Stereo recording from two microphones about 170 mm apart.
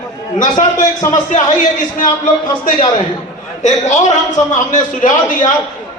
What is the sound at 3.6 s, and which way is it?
A man's voice, 45° left (ahead or behind).